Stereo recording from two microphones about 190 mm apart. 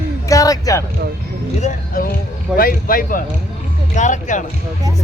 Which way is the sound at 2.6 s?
50° left (ahead or behind).